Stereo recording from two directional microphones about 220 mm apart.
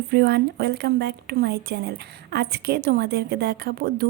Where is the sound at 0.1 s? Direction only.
45° right (ahead or behind).